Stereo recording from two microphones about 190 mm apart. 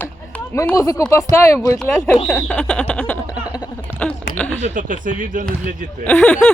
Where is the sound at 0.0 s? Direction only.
10° left (ahead or behind).